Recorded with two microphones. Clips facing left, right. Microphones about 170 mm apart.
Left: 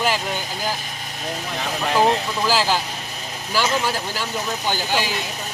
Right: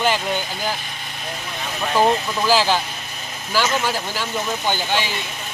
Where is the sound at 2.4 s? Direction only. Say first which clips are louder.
Right 3 dB; centre (ahead or behind).